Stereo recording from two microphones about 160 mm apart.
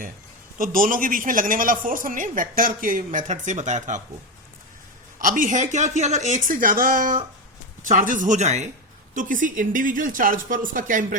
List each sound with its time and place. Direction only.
0.6 s a man's voice: 60° right (ahead or behind)
5.2 s a man's voice: 55° right (ahead or behind)